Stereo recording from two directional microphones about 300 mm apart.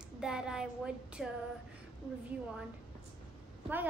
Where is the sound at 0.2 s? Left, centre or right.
Centre.